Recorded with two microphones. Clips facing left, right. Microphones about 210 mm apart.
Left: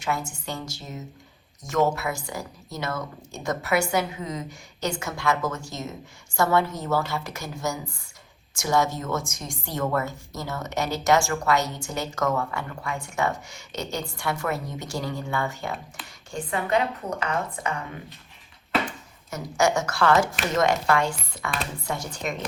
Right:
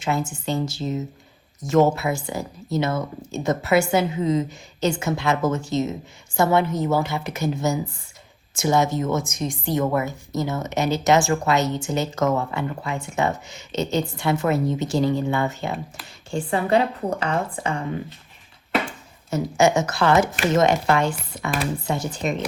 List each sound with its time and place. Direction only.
0.0 s a woman's voice: 25° right (ahead or behind)
16.0 s a woman's voice: centre (ahead or behind)
16.3 s a woman's voice: 30° right (ahead or behind)
18.9 s a woman's voice: 25° right (ahead or behind)